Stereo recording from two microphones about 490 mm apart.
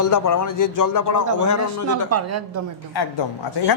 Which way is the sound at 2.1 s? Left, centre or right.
Right.